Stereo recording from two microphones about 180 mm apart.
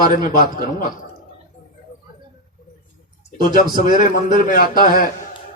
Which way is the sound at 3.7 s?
45° left (ahead or behind).